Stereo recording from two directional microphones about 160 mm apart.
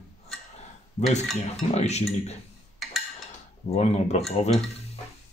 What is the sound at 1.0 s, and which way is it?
Cutlery, 45° left (ahead or behind).